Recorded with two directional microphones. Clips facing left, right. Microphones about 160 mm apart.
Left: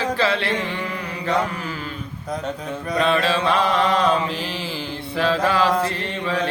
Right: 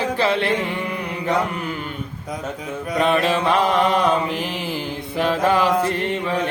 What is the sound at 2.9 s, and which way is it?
Mantra, 15° right (ahead or behind).